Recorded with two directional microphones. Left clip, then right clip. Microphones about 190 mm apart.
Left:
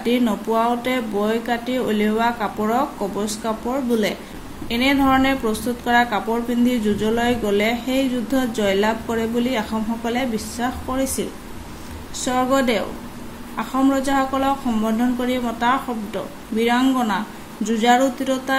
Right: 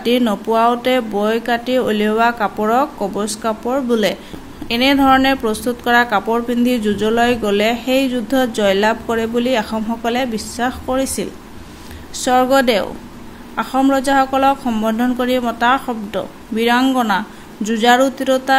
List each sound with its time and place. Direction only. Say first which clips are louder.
0.0 s speech: right 4 dB; 40° right (ahead or behind)